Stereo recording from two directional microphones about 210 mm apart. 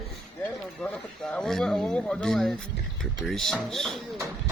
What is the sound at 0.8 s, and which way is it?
Speech, 5° left (ahead or behind).